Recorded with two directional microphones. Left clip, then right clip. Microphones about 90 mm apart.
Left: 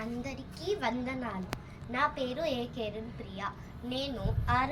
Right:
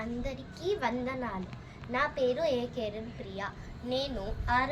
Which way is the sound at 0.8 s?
35° right (ahead or behind).